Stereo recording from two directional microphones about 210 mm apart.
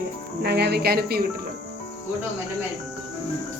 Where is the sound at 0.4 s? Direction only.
50° right (ahead or behind).